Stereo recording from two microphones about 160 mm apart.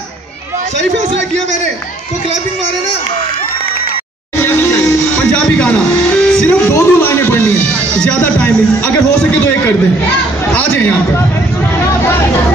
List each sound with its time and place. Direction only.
4.4 s music: 15° left (ahead or behind)
10.5 s speech: 10° left (ahead or behind)